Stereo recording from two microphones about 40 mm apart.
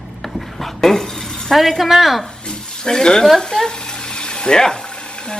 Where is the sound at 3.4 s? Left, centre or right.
Centre.